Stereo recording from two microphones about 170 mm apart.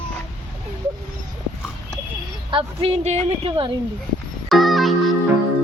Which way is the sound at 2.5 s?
35° right (ahead or behind).